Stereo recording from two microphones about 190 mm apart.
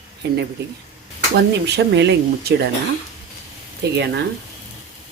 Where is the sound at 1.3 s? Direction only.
65° right (ahead or behind).